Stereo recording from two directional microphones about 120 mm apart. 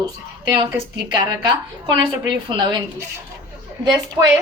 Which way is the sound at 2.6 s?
40° right (ahead or behind).